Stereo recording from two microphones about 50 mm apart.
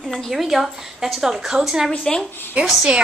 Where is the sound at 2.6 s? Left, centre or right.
Right.